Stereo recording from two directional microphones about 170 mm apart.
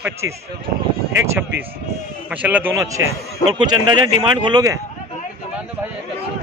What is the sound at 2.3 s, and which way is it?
Speech, 10° right (ahead or behind).